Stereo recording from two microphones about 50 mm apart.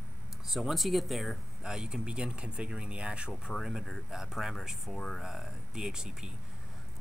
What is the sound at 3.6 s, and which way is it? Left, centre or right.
Speech, centre.